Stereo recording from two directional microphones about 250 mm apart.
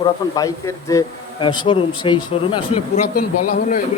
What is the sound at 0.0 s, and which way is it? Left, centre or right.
A woman's voice, centre.